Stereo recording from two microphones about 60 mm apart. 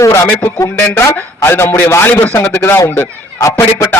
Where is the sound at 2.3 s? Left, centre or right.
Left.